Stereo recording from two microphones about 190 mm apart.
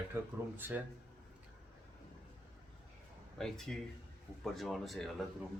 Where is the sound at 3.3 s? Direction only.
Centre (ahead or behind).